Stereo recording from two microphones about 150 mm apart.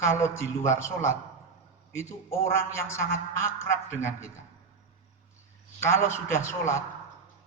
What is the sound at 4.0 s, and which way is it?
Speech, 20° left (ahead or behind).